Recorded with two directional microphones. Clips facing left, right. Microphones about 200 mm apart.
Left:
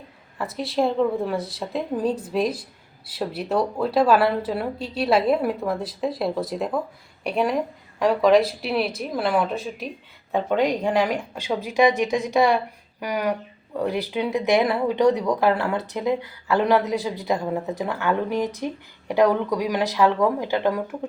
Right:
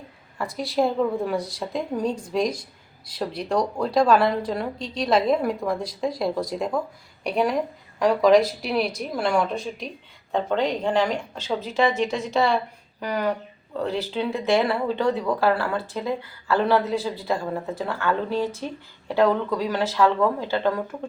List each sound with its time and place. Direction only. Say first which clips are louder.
0.3 s a woman's voice: even; centre (ahead or behind)